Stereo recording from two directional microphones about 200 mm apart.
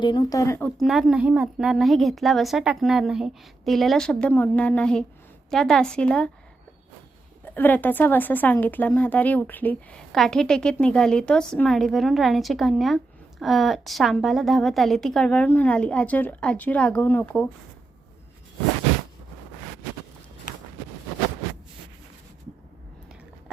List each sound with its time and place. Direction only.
0.0 s speech: 20° left (ahead or behind)
0.8 s speech: centre (ahead or behind)
7.4 s speech: 10° left (ahead or behind)